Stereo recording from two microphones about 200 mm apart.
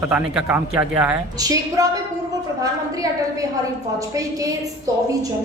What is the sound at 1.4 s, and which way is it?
A woman's voice, 20° right (ahead or behind).